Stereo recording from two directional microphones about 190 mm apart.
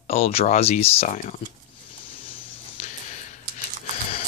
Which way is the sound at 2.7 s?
40° left (ahead or behind).